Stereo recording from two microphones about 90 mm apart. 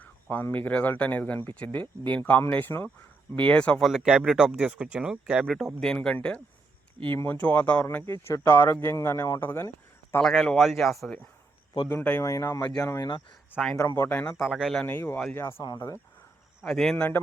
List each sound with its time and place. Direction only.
0.0 s speech: 20° left (ahead or behind)
3.8 s speech: centre (ahead or behind)
5.4 s speech: centre (ahead or behind)
7.3 s speech: 15° left (ahead or behind)
8.0 s speech: 30° left (ahead or behind)
10.2 s speech: 5° left (ahead or behind)
11.9 s speech: 20° left (ahead or behind)
12.2 s speech: 35° left (ahead or behind)
13.7 s speech: 30° left (ahead or behind)
14.3 s speech: centre (ahead or behind)
14.8 s speech: 20° left (ahead or behind)
16.6 s speech: 5° left (ahead or behind)